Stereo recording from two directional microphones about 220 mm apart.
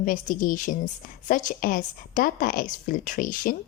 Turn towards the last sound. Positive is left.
turn(degrees=40)  # may be behind; listen again after turning